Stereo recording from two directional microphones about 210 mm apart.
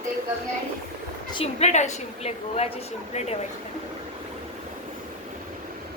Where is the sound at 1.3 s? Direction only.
25° left (ahead or behind).